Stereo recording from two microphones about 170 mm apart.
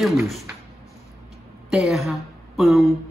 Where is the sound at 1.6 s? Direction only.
Centre (ahead or behind).